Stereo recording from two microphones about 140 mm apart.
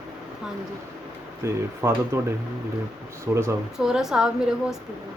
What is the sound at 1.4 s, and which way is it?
Speech, 20° right (ahead or behind).